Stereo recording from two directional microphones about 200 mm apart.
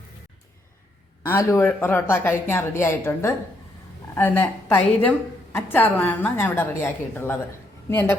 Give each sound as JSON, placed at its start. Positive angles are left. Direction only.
{"t": 1.2, "sound": "a woman's voice", "side_deg": 15}